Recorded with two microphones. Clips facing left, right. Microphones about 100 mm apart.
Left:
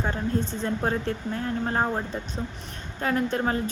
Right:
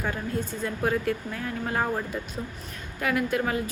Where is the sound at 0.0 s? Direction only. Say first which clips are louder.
Left 3 dB; 25° left (ahead or behind).